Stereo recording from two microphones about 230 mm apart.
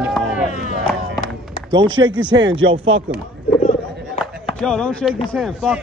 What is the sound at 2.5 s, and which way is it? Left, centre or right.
Speech, right.